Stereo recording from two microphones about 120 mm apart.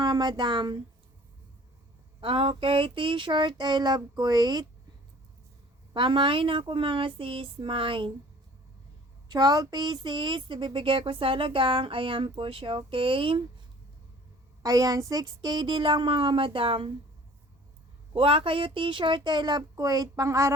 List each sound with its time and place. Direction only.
0.0 s speech: 35° right (ahead or behind)
2.2 s speech: 50° right (ahead or behind)
5.9 s speech: 45° right (ahead or behind)
9.3 s speech: 30° right (ahead or behind)
14.6 s a woman's voice: 30° right (ahead or behind); by 16.9 s 50° right (ahead or behind)
18.1 s speech: 50° right (ahead or behind); by 20.5 s 25° right (ahead or behind)